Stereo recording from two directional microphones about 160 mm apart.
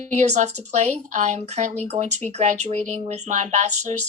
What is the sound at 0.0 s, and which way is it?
Speech, 45° right (ahead or behind).